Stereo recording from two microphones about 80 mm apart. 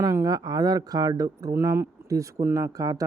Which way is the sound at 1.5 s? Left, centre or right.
Right.